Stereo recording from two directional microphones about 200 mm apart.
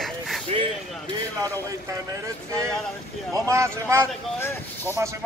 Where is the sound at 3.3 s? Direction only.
15° right (ahead or behind).